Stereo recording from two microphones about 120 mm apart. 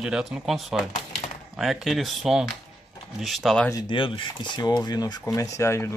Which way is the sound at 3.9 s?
45° left (ahead or behind).